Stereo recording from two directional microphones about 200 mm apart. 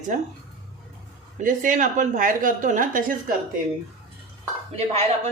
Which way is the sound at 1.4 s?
40° right (ahead or behind).